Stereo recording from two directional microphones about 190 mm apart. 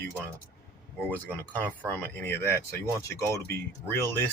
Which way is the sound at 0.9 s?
10° left (ahead or behind).